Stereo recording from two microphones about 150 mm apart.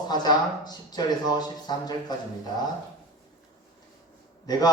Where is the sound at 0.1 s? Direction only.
25° left (ahead or behind).